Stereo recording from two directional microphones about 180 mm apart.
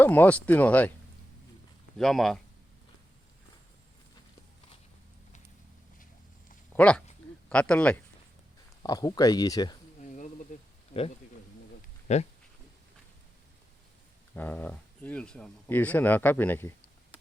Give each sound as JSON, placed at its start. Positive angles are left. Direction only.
{"t": 0.0, "sound": "speech", "side_deg": 10}
{"t": 2.0, "sound": "speech", "side_deg": 0}
{"t": 6.7, "sound": "speech", "side_deg": 5}
{"t": 8.8, "sound": "speech", "side_deg": 20}
{"t": 10.0, "sound": "a sound", "side_deg": 40}
{"t": 12.1, "sound": "speech", "side_deg": 35}
{"t": 14.3, "sound": "speech", "side_deg": 10}